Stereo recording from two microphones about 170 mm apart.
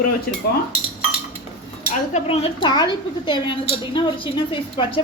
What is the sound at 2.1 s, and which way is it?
A woman's voice, 35° left (ahead or behind).